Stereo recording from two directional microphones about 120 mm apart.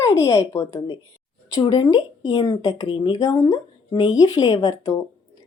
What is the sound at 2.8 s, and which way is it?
Speech, 45° left (ahead or behind).